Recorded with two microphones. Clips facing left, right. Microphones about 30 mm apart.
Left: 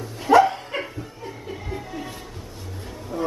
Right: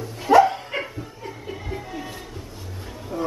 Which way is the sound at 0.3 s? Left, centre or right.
Centre.